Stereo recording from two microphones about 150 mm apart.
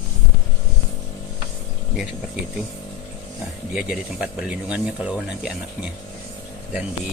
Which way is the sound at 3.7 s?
5° right (ahead or behind).